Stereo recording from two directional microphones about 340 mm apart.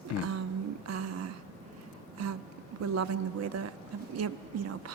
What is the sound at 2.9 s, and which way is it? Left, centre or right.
Speech, right.